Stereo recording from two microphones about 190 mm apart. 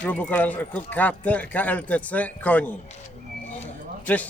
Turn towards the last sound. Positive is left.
turn(degrees=10)  # may be behind; listen again after turning